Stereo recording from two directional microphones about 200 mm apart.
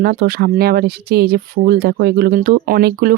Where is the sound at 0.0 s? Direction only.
50° right (ahead or behind).